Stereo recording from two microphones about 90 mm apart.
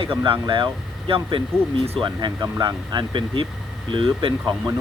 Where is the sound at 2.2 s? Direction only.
55° right (ahead or behind).